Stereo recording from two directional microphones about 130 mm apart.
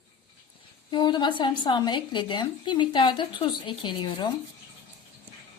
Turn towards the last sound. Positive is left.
turn(degrees=35)  # may be behind; listen again after turning